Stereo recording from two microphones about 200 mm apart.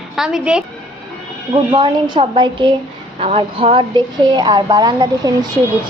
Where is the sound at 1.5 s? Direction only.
25° right (ahead or behind).